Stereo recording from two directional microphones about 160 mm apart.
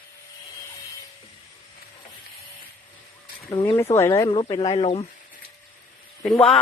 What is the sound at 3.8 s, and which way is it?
Speech, 15° left (ahead or behind).